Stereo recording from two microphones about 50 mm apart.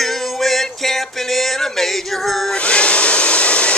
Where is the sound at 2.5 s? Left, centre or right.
Left.